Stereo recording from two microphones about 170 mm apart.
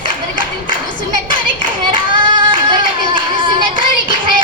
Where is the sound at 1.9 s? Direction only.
30° right (ahead or behind).